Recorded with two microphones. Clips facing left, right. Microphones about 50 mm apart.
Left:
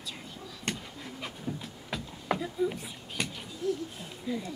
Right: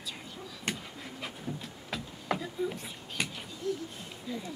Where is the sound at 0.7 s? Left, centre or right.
Centre.